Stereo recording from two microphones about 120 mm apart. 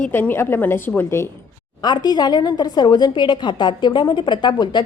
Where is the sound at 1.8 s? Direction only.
35° left (ahead or behind).